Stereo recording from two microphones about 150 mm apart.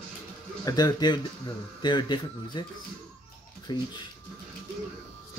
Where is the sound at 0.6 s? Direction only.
25° left (ahead or behind).